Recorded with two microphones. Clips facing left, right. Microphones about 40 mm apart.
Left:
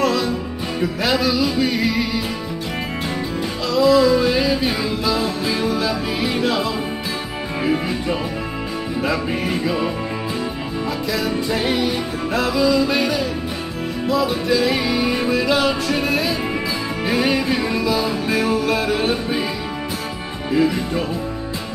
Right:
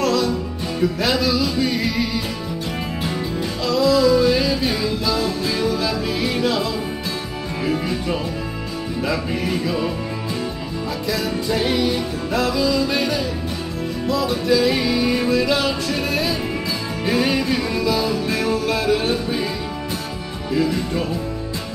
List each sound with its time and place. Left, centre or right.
0.0 s music: centre
3.6 s music: centre
7.6 s speech: centre
9.3 s music: centre
11.1 s music: centre
20.5 s music: left